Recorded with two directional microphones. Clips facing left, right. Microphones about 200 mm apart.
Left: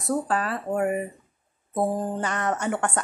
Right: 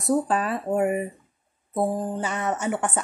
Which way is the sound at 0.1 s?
15° right (ahead or behind).